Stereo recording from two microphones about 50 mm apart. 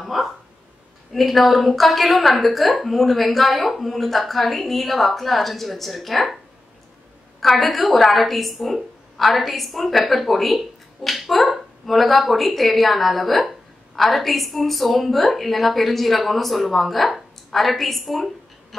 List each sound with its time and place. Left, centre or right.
0.0 s speech: centre